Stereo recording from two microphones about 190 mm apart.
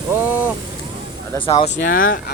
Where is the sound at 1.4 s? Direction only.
30° left (ahead or behind).